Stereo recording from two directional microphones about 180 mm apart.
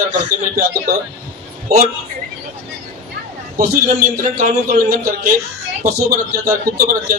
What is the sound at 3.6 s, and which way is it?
A man's voice, 45° right (ahead or behind).